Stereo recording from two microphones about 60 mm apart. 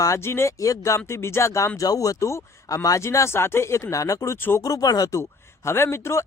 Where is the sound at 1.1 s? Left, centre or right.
Left.